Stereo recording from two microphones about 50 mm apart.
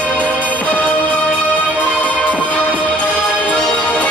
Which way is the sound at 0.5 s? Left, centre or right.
Left.